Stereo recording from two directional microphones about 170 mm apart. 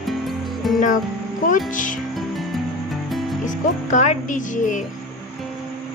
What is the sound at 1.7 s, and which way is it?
Speech, 50° left (ahead or behind).